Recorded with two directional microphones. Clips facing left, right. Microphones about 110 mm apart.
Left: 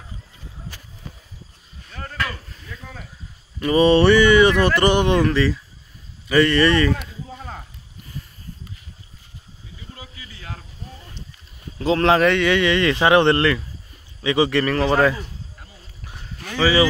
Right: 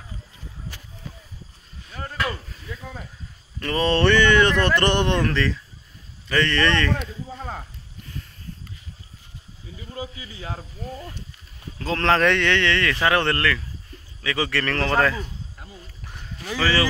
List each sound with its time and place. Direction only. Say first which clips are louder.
2.0 s a sound: even; 15° right (ahead or behind)
3.5 s speech: left 7 dB; 15° left (ahead or behind)
9.9 s snake: right 7 dB; 25° right (ahead or behind)
11.8 s speech: left 4 dB; 15° left (ahead or behind)
16.5 s speech: left 4 dB; 10° left (ahead or behind)